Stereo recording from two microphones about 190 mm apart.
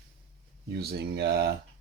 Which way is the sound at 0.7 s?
55° right (ahead or behind).